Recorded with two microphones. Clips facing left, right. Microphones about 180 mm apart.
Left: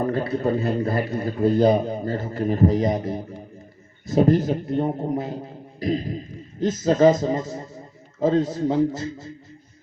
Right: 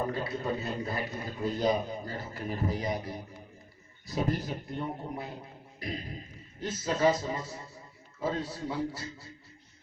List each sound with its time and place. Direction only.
0.0 s a man's voice: 55° left (ahead or behind)
5.0 s a man's voice: 40° left (ahead or behind)